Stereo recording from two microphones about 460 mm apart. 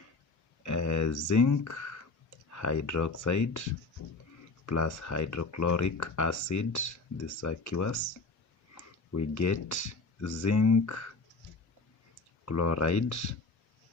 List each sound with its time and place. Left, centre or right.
0.6 s music: left
2.5 s speech: left
12.5 s speech: left